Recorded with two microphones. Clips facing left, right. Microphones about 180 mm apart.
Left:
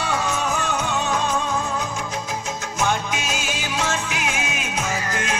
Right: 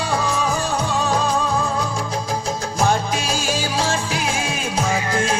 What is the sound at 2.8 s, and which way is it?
Music, 35° right (ahead or behind).